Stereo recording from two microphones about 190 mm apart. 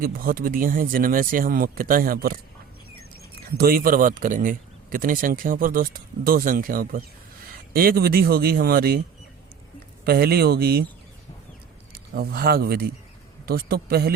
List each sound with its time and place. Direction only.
0.0 s a man's voice: 50° right (ahead or behind)
3.6 s a man's voice: 50° right (ahead or behind)
10.0 s a man's voice: 55° right (ahead or behind)
12.1 s a man's voice: 50° right (ahead or behind)